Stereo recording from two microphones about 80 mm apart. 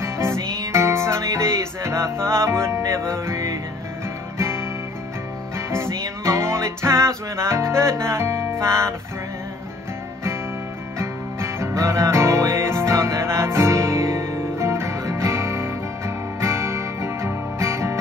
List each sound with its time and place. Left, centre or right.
0.0 s music: right
5.7 s music: right
11.0 s music: right